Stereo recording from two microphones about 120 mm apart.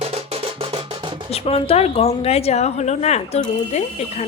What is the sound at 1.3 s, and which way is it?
A woman's voice, 55° left (ahead or behind).